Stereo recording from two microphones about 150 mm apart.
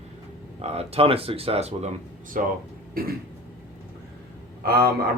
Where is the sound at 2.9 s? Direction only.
80° right.